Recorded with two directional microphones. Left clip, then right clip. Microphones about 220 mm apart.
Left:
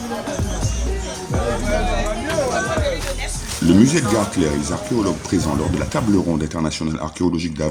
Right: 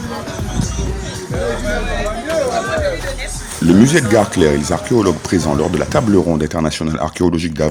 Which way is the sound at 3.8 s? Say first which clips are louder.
Right 6 dB; 40° right (ahead or behind).